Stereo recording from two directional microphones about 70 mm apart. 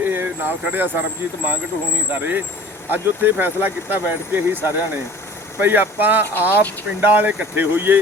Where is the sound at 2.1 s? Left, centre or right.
Right.